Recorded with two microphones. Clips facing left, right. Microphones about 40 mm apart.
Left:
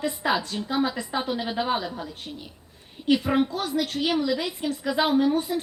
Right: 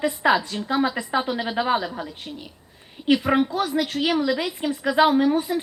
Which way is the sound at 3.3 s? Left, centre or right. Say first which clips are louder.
Right 4 dB; right.